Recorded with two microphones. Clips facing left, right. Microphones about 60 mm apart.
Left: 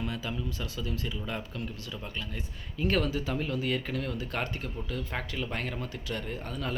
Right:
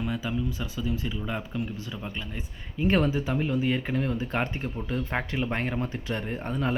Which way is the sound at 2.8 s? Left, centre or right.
Right.